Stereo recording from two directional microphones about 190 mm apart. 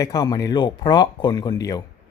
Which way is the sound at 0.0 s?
20° left (ahead or behind).